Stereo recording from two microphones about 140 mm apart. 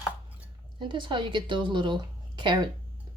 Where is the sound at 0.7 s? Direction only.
35° right (ahead or behind).